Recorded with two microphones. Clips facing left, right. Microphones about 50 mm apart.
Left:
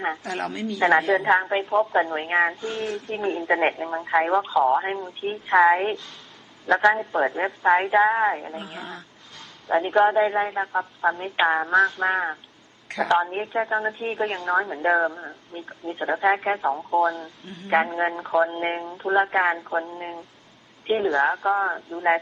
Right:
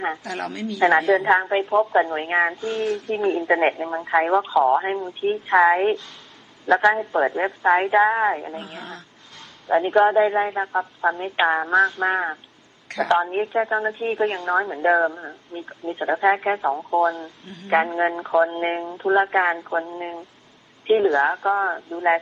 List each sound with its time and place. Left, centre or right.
0.2 s a woman's voice: left
1.1 s a woman's voice: centre
2.6 s speech: right
3.3 s a woman's voice: centre